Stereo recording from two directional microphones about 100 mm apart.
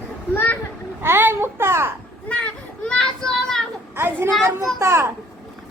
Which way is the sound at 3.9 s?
25° right (ahead or behind).